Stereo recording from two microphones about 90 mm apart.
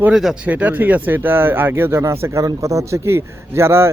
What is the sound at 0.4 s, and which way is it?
Speech, 20° right (ahead or behind).